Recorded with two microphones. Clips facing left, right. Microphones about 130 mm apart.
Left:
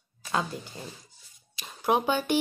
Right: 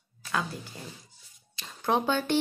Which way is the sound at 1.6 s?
10° left (ahead or behind).